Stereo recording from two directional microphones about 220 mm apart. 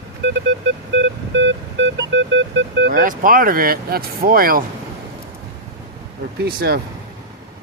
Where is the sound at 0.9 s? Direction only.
55° right (ahead or behind).